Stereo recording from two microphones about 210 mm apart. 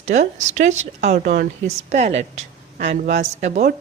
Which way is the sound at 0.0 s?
35° right (ahead or behind).